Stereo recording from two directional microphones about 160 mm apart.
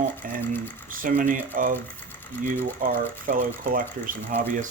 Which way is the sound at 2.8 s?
55° right (ahead or behind).